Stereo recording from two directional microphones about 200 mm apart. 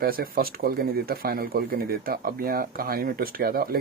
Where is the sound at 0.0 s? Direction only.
45° right (ahead or behind).